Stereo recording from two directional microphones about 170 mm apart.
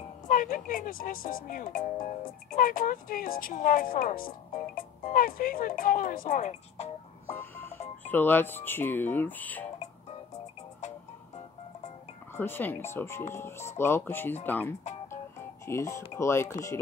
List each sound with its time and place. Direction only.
0.3 s speech: 50° left (ahead or behind)
7.2 s music: 10° left (ahead or behind)
8.1 s speech: 10° left (ahead or behind)
12.4 s speech: 10° left (ahead or behind)